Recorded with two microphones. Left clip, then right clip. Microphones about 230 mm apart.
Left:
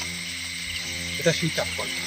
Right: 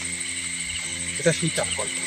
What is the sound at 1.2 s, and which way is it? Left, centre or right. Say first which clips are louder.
Speech: right 1 dB; centre.